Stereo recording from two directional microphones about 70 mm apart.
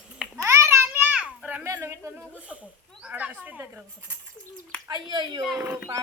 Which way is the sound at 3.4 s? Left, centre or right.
Right.